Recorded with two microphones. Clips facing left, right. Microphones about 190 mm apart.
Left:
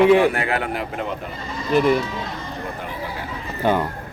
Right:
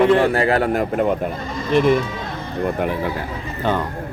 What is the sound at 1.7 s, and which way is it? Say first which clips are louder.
Speech: right 2 dB; centre (ahead or behind).